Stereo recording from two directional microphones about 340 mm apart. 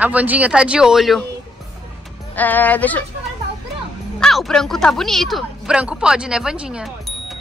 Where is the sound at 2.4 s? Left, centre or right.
Centre.